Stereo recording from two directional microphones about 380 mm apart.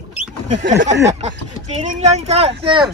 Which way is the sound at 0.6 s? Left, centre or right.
Right.